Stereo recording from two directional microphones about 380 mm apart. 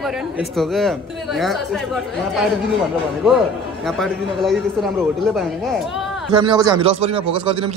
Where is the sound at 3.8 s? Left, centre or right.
Centre.